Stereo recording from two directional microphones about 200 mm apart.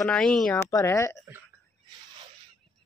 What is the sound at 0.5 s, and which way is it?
Speech, 15° left (ahead or behind).